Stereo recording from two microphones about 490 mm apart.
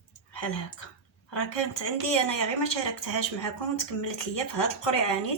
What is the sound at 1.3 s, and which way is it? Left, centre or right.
Speech, left.